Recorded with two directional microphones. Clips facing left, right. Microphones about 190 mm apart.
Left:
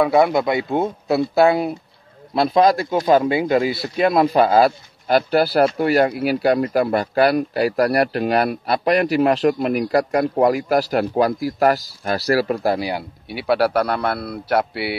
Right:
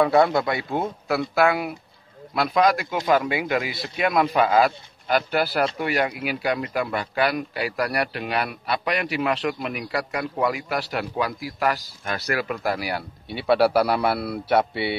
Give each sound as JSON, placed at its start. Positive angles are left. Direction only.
{"t": 0.0, "sound": "speech", "side_deg": 15}
{"t": 12.8, "sound": "a man's voice", "side_deg": 10}